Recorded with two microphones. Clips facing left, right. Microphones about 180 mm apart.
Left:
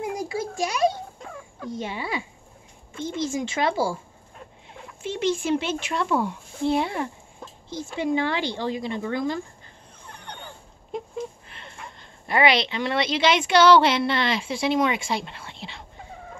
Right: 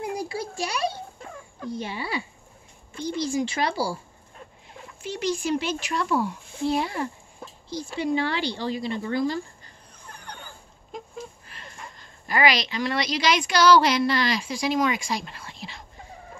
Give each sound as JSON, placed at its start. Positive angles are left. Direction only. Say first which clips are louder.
{"t": 0.2, "sound": "a sound", "louder": "left 3 dB", "side_deg": 20}
{"t": 1.7, "sound": "a woman's voice", "louder": "left 1 dB", "side_deg": 20}
{"t": 5.0, "sound": "a woman's voice", "louder": "left 2 dB", "side_deg": 25}
{"t": 7.7, "sound": "a woman's voice", "louder": "left 1 dB", "side_deg": 20}
{"t": 10.0, "sound": "a sound", "louder": "left 2 dB", "side_deg": 25}
{"t": 12.3, "sound": "a woman's voice", "louder": "left 2 dB", "side_deg": 25}